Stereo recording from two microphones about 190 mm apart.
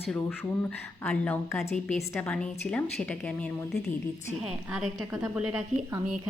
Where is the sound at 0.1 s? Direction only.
5° left (ahead or behind).